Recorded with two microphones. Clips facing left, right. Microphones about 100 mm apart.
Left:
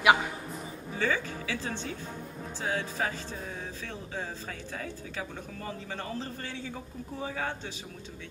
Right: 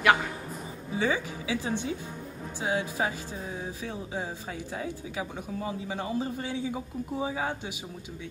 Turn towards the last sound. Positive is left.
turn(degrees=-15)  # may be behind; listen again after turning